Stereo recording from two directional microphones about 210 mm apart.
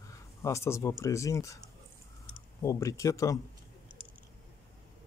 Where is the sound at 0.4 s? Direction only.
15° left (ahead or behind).